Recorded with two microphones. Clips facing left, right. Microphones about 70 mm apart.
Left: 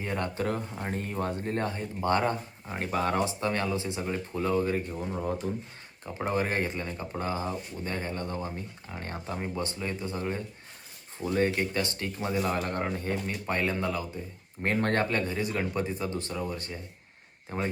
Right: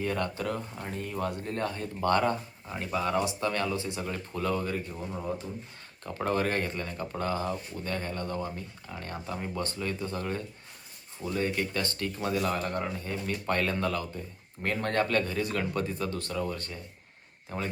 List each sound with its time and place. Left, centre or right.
0.0 s speech: left
0.4 s speech: left
2.7 s speech: left
6.1 s speech: centre
11.2 s speech: left
12.6 s speech: left
13.3 s speech: centre
14.6 s speech: left
15.0 s speech: left
17.5 s speech: left